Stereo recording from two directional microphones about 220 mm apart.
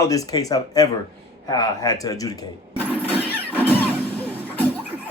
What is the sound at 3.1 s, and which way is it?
Vehicle, 5° right (ahead or behind).